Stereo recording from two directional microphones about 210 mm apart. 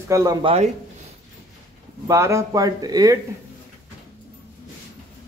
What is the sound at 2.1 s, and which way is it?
Speech, 15° right (ahead or behind).